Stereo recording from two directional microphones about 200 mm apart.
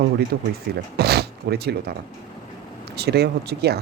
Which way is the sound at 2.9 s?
55° right (ahead or behind).